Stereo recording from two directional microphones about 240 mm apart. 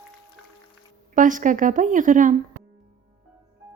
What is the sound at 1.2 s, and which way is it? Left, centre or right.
A woman's voice, right.